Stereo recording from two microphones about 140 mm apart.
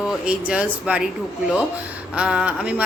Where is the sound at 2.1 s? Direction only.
10° right (ahead or behind).